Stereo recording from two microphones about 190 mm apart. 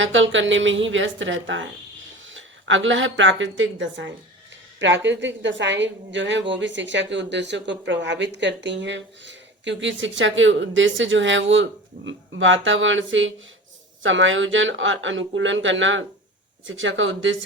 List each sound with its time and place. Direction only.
0.0 s a woman's voice: 85° right